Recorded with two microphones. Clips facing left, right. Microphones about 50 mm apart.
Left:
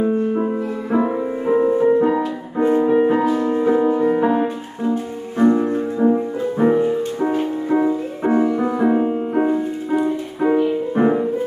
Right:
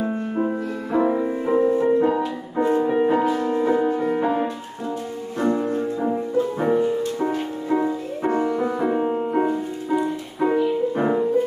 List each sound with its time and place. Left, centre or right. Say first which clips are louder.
0.9 s music: even; centre
2.9 s music: left 3 dB; centre
3.3 s music: left 3 dB; left
5.4 s music: left 6 dB; left
10.5 s music: left 3 dB; centre